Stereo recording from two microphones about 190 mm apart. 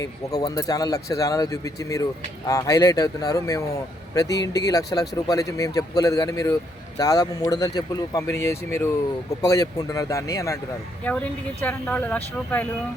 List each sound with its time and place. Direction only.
0.0 s speech: 20° left (ahead or behind)